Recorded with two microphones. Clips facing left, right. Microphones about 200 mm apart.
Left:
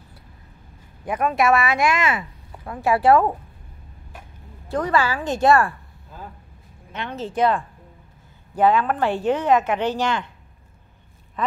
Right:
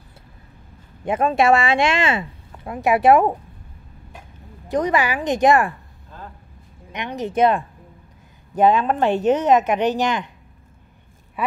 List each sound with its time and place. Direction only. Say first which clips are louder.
1.0 s speech: right 3 dB; 25° right (ahead or behind)
4.6 s speech: right 2 dB; 20° right (ahead or behind)
6.1 s vehicle: even; 10° left (ahead or behind)
6.9 s speech: right 3 dB; 15° right (ahead or behind)
11.4 s speech: right 1 dB; 10° right (ahead or behind)